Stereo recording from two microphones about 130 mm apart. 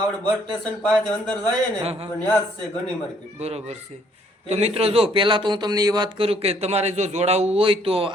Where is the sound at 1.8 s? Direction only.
50° right (ahead or behind).